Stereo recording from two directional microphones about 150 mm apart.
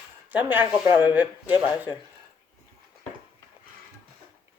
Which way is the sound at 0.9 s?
30° left (ahead or behind).